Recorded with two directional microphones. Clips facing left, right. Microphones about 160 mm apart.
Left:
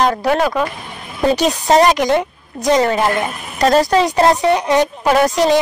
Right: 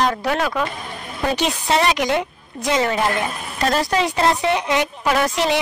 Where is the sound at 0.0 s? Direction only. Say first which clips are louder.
Left 5 dB; 40° left (ahead or behind).